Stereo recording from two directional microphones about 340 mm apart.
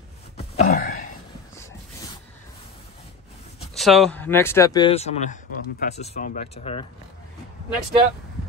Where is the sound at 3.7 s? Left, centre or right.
Centre.